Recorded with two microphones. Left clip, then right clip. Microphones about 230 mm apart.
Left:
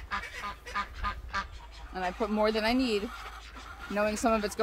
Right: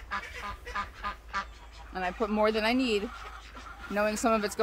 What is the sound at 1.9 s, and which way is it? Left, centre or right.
Speech, centre.